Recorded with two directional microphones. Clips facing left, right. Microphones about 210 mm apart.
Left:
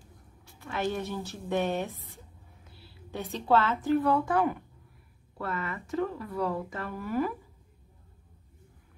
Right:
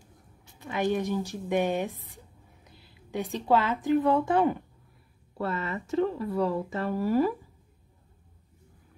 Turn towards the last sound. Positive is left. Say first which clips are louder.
# right 6 dB
turn(degrees=-30)  # may be behind; listen again after turning